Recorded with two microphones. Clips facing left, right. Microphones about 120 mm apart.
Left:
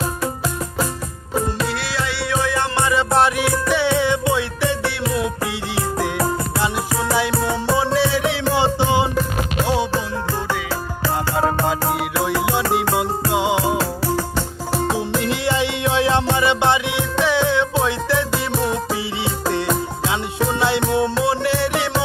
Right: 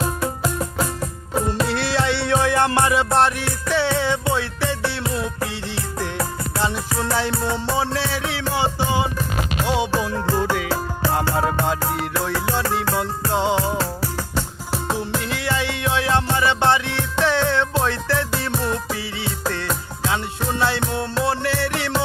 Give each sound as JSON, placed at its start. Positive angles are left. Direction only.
{"t": 0.0, "sound": "music", "side_deg": 5}
{"t": 1.7, "sound": "music", "side_deg": -30}
{"t": 2.7, "sound": "music", "side_deg": -5}
{"t": 7.1, "sound": "music", "side_deg": 10}
{"t": 9.9, "sound": "music", "side_deg": -15}
{"t": 11.6, "sound": "music", "side_deg": 5}
{"t": 15.3, "sound": "music", "side_deg": 20}